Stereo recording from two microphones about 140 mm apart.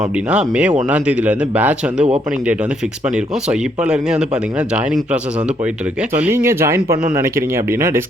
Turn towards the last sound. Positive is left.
turn(degrees=-20)  # may be behind; listen again after turning